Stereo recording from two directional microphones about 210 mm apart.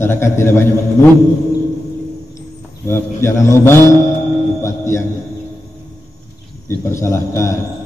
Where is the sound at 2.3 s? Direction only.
10° left (ahead or behind).